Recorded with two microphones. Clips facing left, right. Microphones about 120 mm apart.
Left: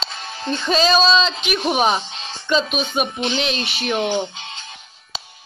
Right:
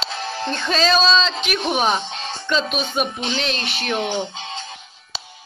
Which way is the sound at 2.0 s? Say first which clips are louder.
Right 4 dB; 50° right (ahead or behind).